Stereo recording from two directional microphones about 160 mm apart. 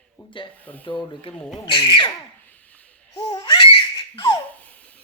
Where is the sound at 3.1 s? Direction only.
30° left (ahead or behind).